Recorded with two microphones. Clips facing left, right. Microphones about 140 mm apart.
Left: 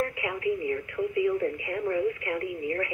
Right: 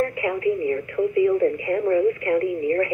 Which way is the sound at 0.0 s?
45° right (ahead or behind).